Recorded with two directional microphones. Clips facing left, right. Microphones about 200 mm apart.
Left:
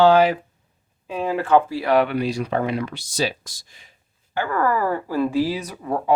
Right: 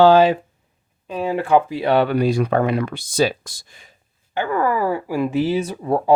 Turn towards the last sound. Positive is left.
turn(degrees=-30)  # may be behind; listen again after turning